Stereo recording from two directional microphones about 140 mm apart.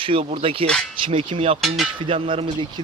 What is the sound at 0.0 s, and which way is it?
Speech, 40° right (ahead or behind).